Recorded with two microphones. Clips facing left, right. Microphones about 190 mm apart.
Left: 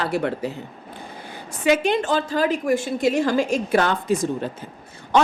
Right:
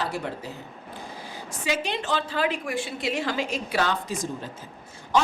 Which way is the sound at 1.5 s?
55° left (ahead or behind).